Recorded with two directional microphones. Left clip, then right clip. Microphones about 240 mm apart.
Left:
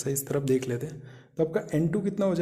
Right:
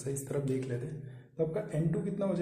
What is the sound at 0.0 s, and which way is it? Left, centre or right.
A man's voice, left.